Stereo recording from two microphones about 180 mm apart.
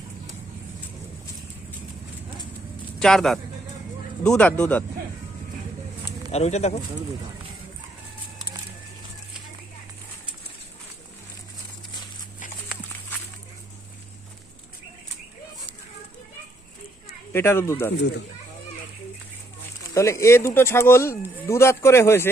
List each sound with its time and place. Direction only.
3.0 s speech: 5° left (ahead or behind)
6.3 s speech: 35° left (ahead or behind)
17.3 s speech: 15° left (ahead or behind)
19.9 s speech: 15° left (ahead or behind)